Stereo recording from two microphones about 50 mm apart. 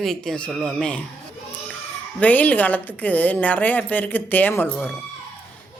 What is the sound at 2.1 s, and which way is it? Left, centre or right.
A woman's voice, left.